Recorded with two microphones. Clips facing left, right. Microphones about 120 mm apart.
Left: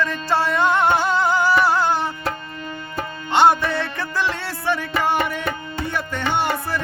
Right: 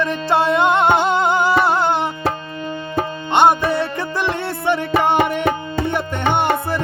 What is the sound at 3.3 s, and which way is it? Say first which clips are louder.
Music: right 2 dB; 15° right (ahead or behind).